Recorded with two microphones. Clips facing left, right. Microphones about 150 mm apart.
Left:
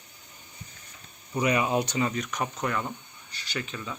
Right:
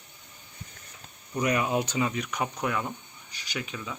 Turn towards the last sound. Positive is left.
turn(degrees=-10)  # may be behind; listen again after turning